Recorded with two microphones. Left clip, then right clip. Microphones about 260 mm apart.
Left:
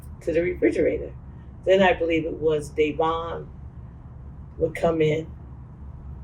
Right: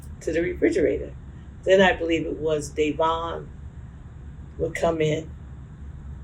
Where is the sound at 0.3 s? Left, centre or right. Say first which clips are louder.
Left 1 dB; right.